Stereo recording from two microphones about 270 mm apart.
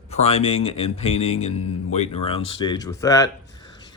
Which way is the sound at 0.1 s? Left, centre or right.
Left.